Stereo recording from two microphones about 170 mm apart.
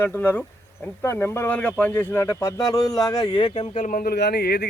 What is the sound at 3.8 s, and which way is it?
Speech, 55° left (ahead or behind).